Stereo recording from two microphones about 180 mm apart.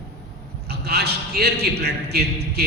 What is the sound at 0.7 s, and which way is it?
A man's voice, 65° right (ahead or behind).